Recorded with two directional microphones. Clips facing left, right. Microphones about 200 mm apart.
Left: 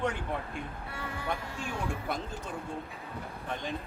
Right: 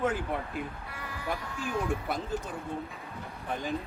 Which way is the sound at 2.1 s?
Centre (ahead or behind).